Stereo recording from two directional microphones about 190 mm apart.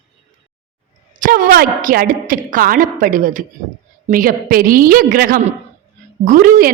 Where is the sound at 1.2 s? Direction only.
50° right (ahead or behind).